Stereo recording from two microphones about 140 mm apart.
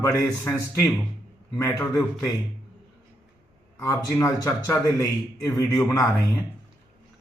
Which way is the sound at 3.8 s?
20° left (ahead or behind).